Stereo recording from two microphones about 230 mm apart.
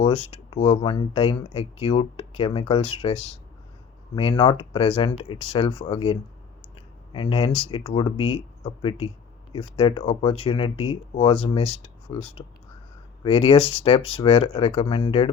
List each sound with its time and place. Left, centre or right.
0.0 s speech: left